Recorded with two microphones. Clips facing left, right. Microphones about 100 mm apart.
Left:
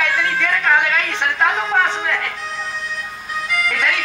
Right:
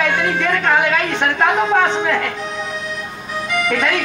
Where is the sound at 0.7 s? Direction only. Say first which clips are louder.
Right 2 dB; centre (ahead or behind).